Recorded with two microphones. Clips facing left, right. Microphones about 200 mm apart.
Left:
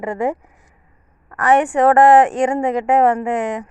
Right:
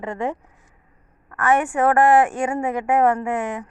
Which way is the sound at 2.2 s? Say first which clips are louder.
Left 5 dB; 20° left (ahead or behind).